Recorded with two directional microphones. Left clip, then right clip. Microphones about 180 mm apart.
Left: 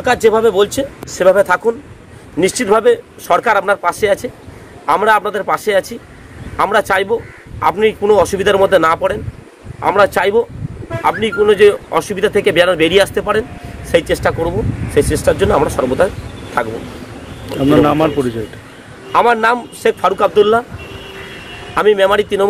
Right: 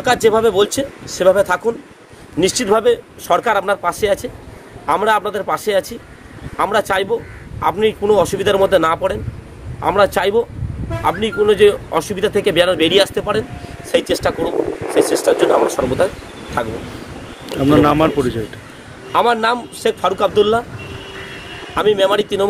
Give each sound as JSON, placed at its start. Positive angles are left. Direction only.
{"t": 0.0, "sound": "speech", "side_deg": 0}
{"t": 17.5, "sound": "speech", "side_deg": -5}
{"t": 20.8, "sound": "vehicle", "side_deg": -60}
{"t": 21.7, "sound": "speech", "side_deg": 5}